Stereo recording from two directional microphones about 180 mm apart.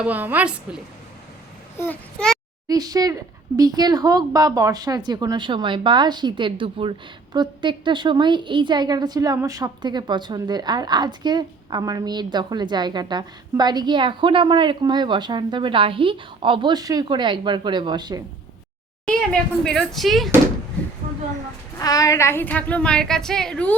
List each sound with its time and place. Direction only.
0.0 s a woman's voice: 10° right (ahead or behind)
1.8 s speech: 5° left (ahead or behind)
2.6 s a woman's voice: 20° right (ahead or behind)
19.0 s speech: 5° left (ahead or behind)
21.8 s a woman's voice: 20° left (ahead or behind)